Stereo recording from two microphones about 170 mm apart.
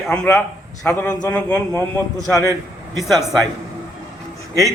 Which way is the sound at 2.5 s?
20° right (ahead or behind).